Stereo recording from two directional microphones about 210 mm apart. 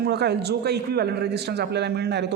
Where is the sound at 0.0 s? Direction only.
50° right (ahead or behind).